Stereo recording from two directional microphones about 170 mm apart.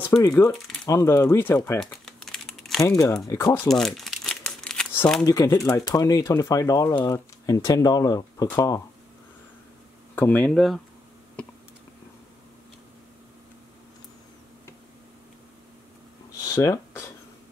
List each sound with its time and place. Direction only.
0.1 s speech: 10° left (ahead or behind)
1.8 s crumpling: 5° left (ahead or behind)
2.8 s speech: 20° left (ahead or behind)
3.6 s crumpling: centre (ahead or behind)
5.2 s speech: 20° left (ahead or behind)
10.1 s speech: 10° left (ahead or behind)
16.5 s a sound: 15° left (ahead or behind)